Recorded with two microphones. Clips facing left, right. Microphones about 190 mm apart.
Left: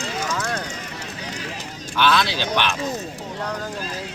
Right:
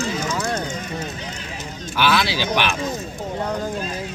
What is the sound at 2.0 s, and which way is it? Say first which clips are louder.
Speech: even; 5° right (ahead or behind).